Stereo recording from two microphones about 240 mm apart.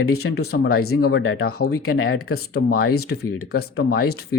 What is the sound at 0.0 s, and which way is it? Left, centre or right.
Speech, left.